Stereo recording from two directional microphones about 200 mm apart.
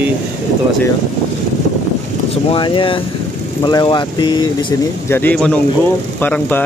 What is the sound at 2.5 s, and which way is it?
Speech, 25° left (ahead or behind).